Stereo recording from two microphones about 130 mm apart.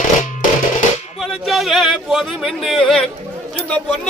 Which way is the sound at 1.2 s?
Centre (ahead or behind).